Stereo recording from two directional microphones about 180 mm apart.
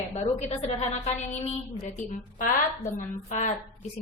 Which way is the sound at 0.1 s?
40° left (ahead or behind).